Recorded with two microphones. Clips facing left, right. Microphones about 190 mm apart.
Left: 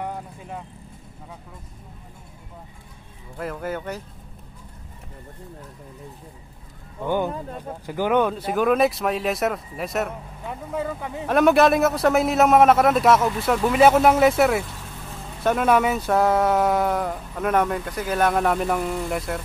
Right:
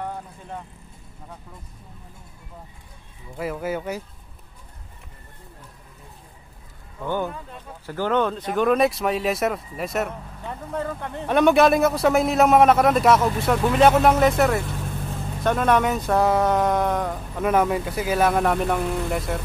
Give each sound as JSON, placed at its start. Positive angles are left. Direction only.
{"t": 0.0, "sound": "vehicle", "side_deg": 5}
{"t": 3.3, "sound": "speech", "side_deg": -5}
{"t": 7.1, "sound": "speech", "side_deg": 15}
{"t": 7.3, "sound": "speech", "side_deg": 45}
{"t": 7.8, "sound": "speech", "side_deg": 15}